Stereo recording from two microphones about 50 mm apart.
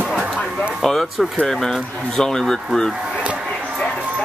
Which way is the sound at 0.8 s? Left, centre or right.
Centre.